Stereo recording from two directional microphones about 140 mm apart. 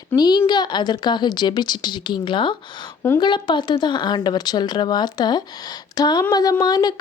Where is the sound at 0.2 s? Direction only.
30° left (ahead or behind).